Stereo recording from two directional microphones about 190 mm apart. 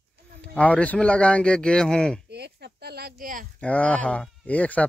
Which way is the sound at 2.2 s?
60° right (ahead or behind).